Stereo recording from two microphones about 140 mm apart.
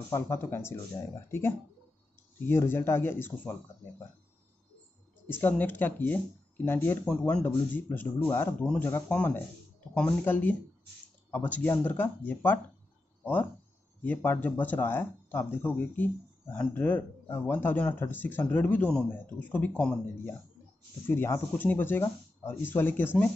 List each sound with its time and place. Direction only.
0.1 s speech: 15° left (ahead or behind)
5.4 s speech: 15° left (ahead or behind)
21.1 s speech: 15° left (ahead or behind)